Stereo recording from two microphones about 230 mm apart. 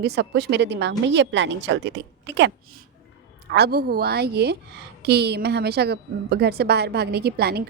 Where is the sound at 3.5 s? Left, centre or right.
Right.